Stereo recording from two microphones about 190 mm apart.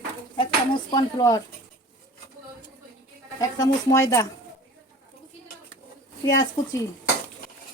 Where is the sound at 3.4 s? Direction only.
20° left (ahead or behind).